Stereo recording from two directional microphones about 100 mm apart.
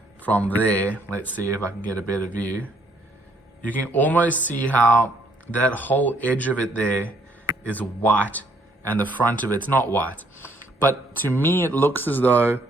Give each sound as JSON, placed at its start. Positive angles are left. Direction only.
{"t": 0.2, "sound": "speech", "side_deg": 15}
{"t": 3.7, "sound": "speech", "side_deg": 15}